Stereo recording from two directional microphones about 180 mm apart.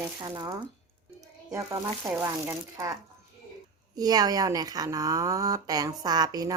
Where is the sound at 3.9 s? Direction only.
20° right (ahead or behind).